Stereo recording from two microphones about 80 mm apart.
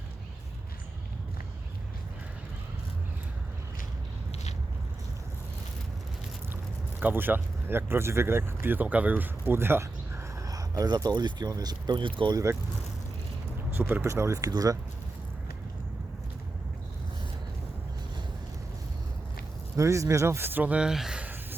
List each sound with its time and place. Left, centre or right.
7.0 s speech: right
10.3 s speech: right
12.3 s speech: right
13.7 s speech: right
14.1 s speech: right
19.7 s speech: right
20.7 s speech: centre